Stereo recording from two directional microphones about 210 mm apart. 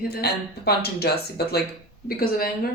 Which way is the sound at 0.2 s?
50° left (ahead or behind).